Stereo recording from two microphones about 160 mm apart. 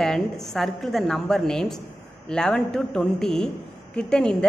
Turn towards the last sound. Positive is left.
turn(degrees=5)  # may be behind; listen again after turning